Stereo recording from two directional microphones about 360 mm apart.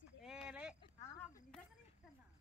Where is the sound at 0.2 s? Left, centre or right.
Centre.